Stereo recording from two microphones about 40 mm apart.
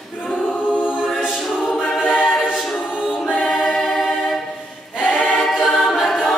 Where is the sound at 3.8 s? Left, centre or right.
Centre.